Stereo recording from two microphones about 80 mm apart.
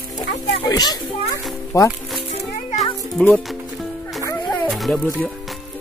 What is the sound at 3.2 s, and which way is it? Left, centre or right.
Speech, centre.